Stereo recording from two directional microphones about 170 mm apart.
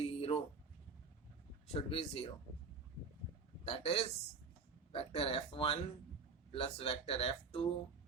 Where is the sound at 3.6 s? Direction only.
35° left (ahead or behind).